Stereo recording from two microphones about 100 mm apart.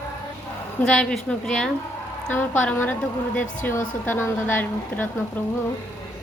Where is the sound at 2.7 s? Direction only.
20° left (ahead or behind).